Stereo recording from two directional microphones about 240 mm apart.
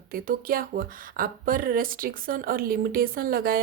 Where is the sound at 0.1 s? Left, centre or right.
Right.